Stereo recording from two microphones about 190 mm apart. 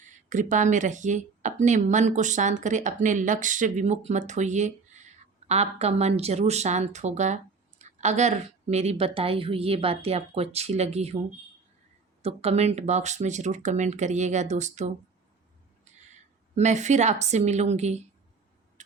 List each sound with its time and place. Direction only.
0.0 s speech: 40° right (ahead or behind)
12.2 s speech: 35° right (ahead or behind)
16.6 s speech: 35° right (ahead or behind)